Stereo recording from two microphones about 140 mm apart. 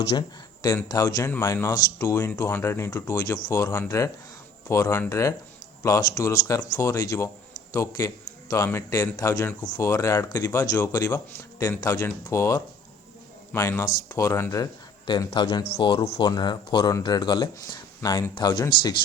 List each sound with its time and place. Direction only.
0.2 s a man's voice: 30° left (ahead or behind)